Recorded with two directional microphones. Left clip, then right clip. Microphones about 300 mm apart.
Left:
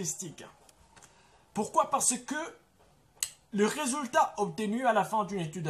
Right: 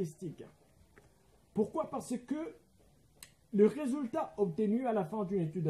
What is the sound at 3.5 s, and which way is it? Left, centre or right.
Speech, centre.